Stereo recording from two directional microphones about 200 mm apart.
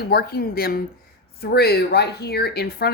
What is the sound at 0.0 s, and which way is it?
A woman's voice, 50° left (ahead or behind).